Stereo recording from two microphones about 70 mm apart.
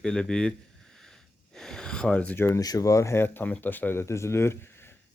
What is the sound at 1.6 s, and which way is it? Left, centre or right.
Speech, centre.